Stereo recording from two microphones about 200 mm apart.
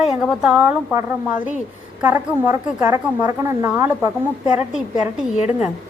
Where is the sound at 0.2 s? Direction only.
Centre (ahead or behind).